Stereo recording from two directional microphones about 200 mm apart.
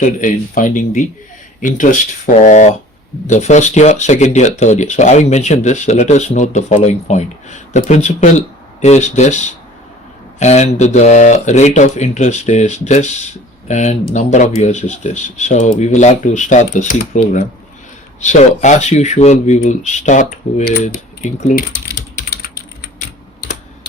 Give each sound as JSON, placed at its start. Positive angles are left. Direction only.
{"t": 0.0, "sound": "speech", "side_deg": 40}